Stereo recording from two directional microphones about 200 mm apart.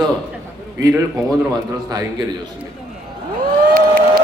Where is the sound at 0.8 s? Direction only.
15° right (ahead or behind).